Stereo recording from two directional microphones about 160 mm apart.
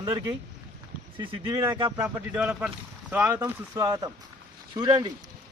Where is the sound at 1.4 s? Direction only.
25° right (ahead or behind).